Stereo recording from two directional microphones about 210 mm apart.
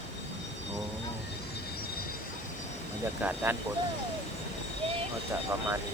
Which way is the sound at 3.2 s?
10° right (ahead or behind).